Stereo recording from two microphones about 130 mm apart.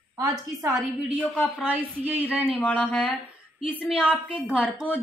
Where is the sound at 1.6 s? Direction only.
15° right (ahead or behind).